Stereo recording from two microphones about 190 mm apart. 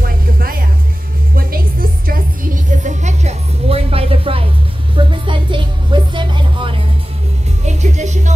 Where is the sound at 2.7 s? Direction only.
40° right (ahead or behind).